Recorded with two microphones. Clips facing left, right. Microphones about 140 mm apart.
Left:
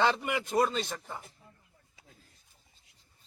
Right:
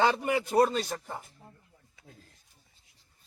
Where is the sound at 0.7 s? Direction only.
10° right (ahead or behind).